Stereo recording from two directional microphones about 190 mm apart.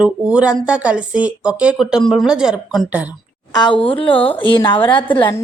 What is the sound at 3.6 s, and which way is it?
Speech, 25° left (ahead or behind).